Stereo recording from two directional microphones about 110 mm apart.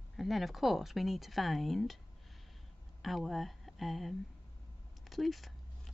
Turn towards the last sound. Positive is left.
turn(degrees=0)  # may be behind; listen again after turning